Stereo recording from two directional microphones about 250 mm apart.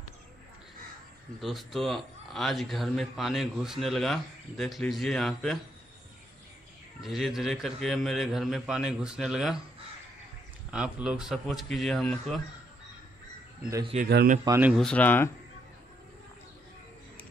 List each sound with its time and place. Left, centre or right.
1.4 s a man's voice: centre
7.0 s a man's voice: centre
10.7 s a man's voice: centre
13.6 s speech: centre
13.9 s speech: right
14.4 s speech: centre
14.7 s speech: centre